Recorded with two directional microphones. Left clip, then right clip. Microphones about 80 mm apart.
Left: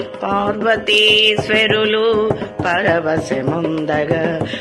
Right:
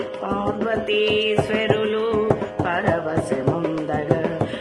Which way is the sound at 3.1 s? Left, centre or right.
Centre.